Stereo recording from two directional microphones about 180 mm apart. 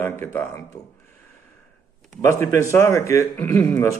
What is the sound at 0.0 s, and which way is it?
Speech, 15° left (ahead or behind).